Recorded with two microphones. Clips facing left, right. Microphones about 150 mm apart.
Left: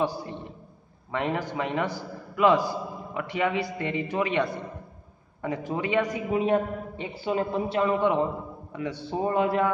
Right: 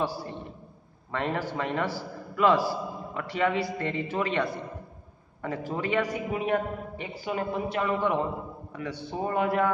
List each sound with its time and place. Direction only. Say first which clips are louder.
0.0 s a man's voice: left 2 dB; 20° left (ahead or behind)